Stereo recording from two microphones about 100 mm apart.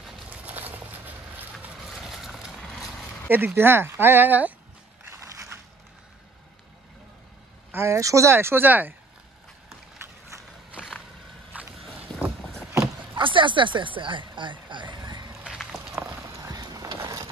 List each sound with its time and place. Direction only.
0.3 s a sound: 15° right (ahead or behind)
1.8 s vehicle: 5° right (ahead or behind)
2.7 s horse: centre (ahead or behind)
3.3 s speech: 20° right (ahead or behind)
5.0 s crushing: 30° right (ahead or behind)
7.7 s speech: 25° right (ahead or behind)
10.7 s vehicle: 10° right (ahead or behind)
12.1 s boat: 10° left (ahead or behind)
13.1 s a sound: 55° right (ahead or behind)
15.4 s walk: 5° right (ahead or behind)
16.3 s run: 35° right (ahead or behind)